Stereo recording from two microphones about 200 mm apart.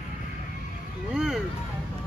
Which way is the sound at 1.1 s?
5° right (ahead or behind).